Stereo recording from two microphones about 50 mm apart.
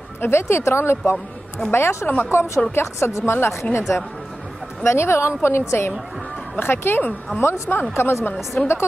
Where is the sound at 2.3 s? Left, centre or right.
Left.